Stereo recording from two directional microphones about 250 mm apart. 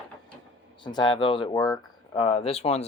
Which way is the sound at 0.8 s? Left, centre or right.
Centre.